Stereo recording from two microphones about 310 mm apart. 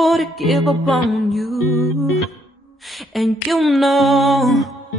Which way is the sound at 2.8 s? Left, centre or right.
Centre.